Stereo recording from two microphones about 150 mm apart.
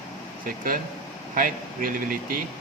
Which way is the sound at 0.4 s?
70° right (ahead or behind).